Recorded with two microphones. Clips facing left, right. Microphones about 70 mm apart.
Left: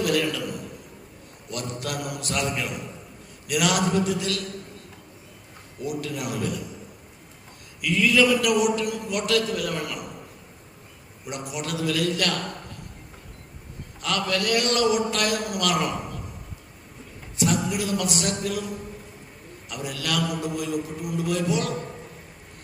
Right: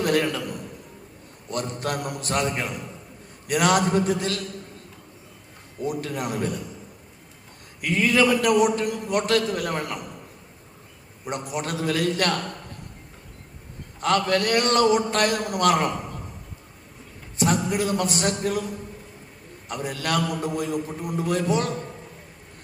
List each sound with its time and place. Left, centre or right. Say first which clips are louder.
0.0 s a sound: right 1 dB; right
1.5 s a man's voice: right 4 dB; right
5.8 s a man's voice: right 2 dB; right
7.8 s a man's voice: even; right
11.3 s a man's voice: right 3 dB; right
14.0 s a man's voice: right 4 dB; right
17.3 s a man's voice: right 2 dB; right
19.6 s a man's voice: right 3 dB; right